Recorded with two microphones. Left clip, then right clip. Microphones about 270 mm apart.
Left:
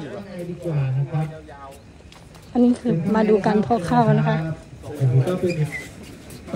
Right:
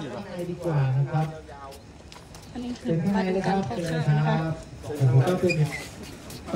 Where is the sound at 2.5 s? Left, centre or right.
Centre.